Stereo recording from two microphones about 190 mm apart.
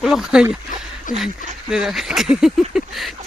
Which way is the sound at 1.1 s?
45° left (ahead or behind).